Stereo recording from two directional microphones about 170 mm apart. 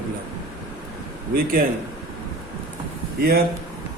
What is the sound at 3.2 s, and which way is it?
Speech, 65° right (ahead or behind).